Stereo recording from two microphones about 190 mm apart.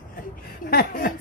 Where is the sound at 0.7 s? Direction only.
50° left (ahead or behind).